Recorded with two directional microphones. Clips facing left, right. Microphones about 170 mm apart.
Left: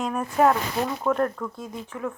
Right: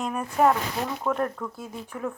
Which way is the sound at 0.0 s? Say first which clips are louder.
Left 1 dB; centre (ahead or behind).